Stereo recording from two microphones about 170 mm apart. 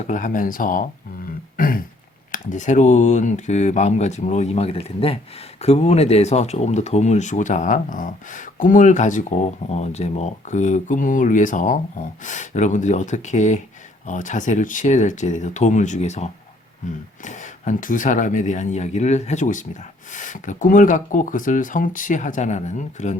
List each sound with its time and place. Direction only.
0.1 s speech: 50° left (ahead or behind)
1.5 s throat clearing: 55° left (ahead or behind)
2.3 s speech: 50° left (ahead or behind)